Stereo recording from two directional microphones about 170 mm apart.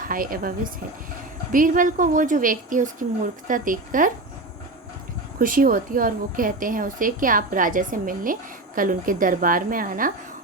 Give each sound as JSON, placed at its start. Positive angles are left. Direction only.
{"t": 0.0, "sound": "speech", "side_deg": -55}
{"t": 5.4, "sound": "speech", "side_deg": -55}